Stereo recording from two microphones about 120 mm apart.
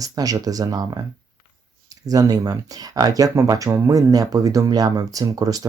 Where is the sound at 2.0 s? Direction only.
30° right (ahead or behind).